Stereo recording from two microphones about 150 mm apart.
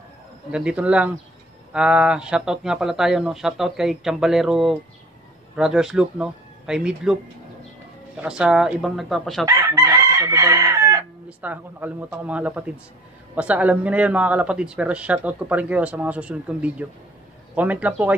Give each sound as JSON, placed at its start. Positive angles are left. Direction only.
{"t": 0.5, "sound": "speech", "side_deg": -5}
{"t": 8.2, "sound": "speech", "side_deg": -5}
{"t": 9.5, "sound": "chicken", "side_deg": -20}
{"t": 11.2, "sound": "speech", "side_deg": -10}